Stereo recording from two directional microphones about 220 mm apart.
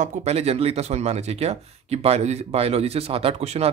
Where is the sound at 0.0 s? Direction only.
30° right (ahead or behind).